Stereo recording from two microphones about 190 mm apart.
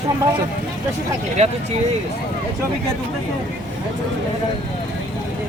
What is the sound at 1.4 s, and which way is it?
Speech, 35° right (ahead or behind).